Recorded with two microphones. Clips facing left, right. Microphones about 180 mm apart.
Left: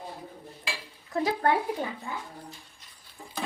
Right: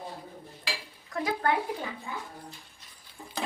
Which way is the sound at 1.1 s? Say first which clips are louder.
Left 3 dB; 30° left (ahead or behind).